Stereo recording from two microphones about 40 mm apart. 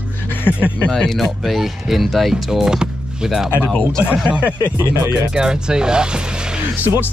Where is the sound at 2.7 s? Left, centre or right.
Centre.